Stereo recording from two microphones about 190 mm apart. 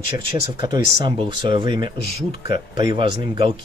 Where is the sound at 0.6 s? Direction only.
25° right (ahead or behind).